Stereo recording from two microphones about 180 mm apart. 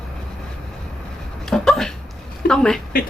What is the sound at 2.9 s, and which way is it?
Speech, 55° left (ahead or behind).